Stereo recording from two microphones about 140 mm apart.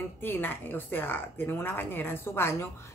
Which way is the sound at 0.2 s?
15° left (ahead or behind).